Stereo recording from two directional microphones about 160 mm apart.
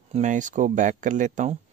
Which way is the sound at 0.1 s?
50° right (ahead or behind).